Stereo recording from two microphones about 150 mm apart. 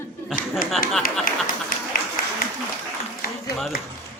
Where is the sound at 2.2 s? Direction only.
70° left (ahead or behind).